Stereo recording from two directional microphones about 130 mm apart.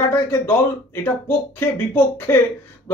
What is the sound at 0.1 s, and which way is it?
Speech, 15° left (ahead or behind).